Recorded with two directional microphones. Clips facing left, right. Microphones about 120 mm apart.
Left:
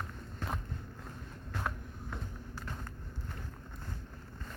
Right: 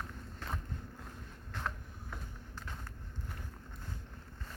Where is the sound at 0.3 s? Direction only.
15° left (ahead or behind).